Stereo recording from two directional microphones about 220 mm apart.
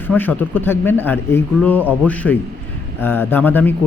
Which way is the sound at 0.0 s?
10° left (ahead or behind).